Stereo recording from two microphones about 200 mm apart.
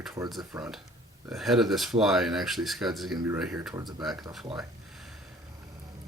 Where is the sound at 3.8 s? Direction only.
20° right (ahead or behind).